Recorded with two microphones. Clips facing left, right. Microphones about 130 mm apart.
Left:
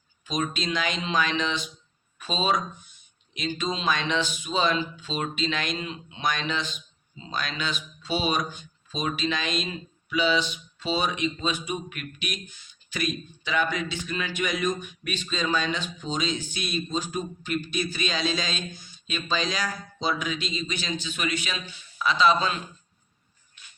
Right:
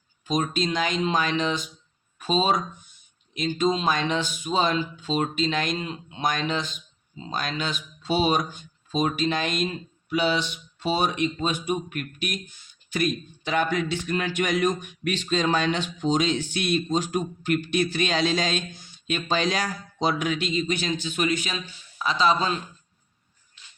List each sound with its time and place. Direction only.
0.3 s speech: 45° right (ahead or behind)